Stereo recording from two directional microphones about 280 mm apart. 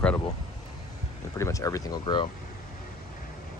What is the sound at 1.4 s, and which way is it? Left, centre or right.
Speech, centre.